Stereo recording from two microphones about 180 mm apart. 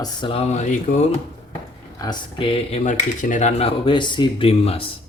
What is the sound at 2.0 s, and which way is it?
Speech, 25° left (ahead or behind).